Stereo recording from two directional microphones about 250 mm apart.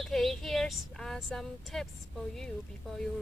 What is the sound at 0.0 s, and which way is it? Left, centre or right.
Speech, centre.